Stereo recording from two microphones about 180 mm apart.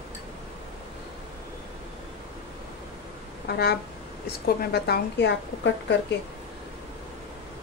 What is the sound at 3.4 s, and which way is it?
A woman's voice, 60° left (ahead or behind).